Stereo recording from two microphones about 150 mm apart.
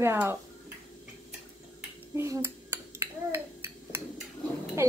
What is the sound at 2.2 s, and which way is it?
Finger snapping, 20° right (ahead or behind).